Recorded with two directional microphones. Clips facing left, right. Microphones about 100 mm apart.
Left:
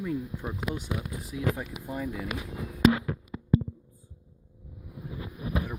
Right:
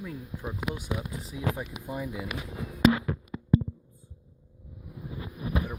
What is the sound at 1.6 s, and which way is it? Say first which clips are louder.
Speech: even; 15° right (ahead or behind).